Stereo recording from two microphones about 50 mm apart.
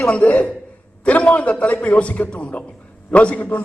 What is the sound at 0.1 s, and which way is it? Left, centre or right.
A man's voice, left.